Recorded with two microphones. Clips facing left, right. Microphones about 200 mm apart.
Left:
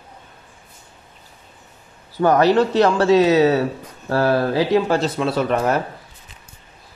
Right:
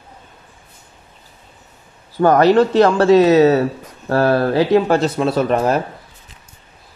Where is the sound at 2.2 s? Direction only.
50° right (ahead or behind).